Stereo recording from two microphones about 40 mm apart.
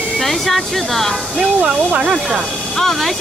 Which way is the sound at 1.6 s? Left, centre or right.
Right.